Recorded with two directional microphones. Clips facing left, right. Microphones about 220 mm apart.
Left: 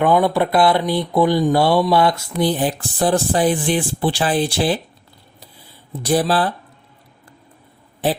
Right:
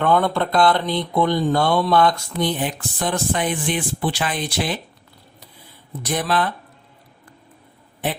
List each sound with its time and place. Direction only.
0.0 s speech: 10° left (ahead or behind)
2.4 s speech: 35° left (ahead or behind)
5.9 s speech: 30° left (ahead or behind)